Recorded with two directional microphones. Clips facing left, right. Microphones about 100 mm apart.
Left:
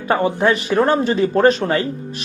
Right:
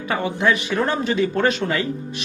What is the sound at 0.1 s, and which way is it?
Speech, 35° left (ahead or behind).